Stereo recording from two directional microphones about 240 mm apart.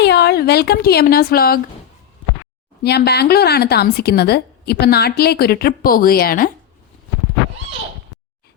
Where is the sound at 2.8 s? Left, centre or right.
Left.